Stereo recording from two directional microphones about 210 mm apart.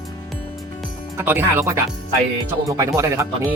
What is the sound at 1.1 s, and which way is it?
Speech, 10° right (ahead or behind).